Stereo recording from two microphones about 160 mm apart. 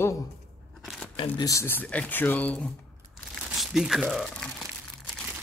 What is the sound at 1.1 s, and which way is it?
Speech, 35° left (ahead or behind).